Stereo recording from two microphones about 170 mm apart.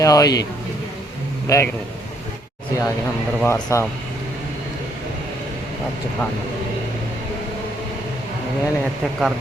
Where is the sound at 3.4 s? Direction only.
15° left (ahead or behind).